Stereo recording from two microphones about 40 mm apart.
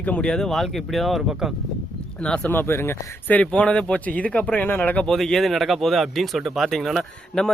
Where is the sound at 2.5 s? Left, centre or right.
Left.